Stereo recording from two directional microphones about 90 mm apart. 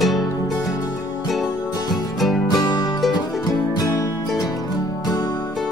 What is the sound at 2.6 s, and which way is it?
Music, 45° left (ahead or behind).